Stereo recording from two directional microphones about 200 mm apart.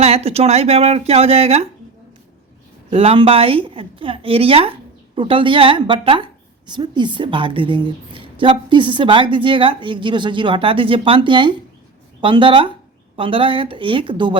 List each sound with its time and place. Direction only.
0.0 s speech: 30° right (ahead or behind)
2.9 s a woman's voice: 30° right (ahead or behind)